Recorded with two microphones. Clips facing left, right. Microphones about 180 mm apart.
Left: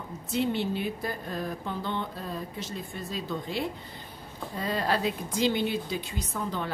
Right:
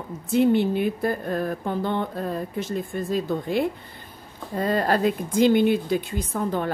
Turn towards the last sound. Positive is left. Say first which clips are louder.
# right 7 dB
turn(degrees=-50)  # may be behind; listen again after turning